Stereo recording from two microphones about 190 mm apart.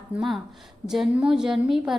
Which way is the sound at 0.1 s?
Centre (ahead or behind).